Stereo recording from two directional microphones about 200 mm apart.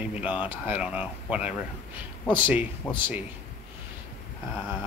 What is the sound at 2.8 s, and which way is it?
Speech, 5° left (ahead or behind).